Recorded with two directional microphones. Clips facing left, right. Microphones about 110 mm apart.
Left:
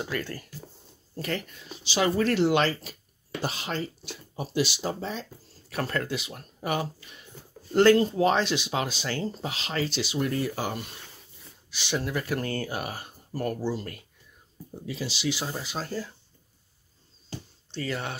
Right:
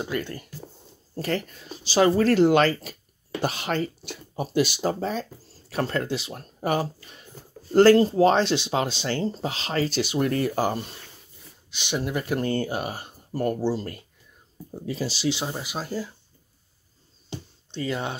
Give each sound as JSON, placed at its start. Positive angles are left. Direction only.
{"t": 0.0, "sound": "speech", "side_deg": -20}
{"t": 1.1, "sound": "speech", "side_deg": -35}
{"t": 3.4, "sound": "speech", "side_deg": -60}
{"t": 5.7, "sound": "speech", "side_deg": -25}
{"t": 11.7, "sound": "speech", "side_deg": -20}
{"t": 15.2, "sound": "speech", "side_deg": -20}
{"t": 17.3, "sound": "a sound", "side_deg": -20}